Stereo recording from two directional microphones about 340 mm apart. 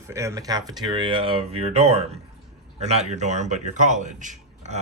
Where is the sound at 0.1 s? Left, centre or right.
Centre.